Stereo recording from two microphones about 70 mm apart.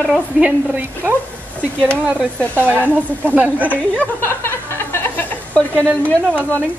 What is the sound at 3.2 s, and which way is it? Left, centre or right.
Speech, right.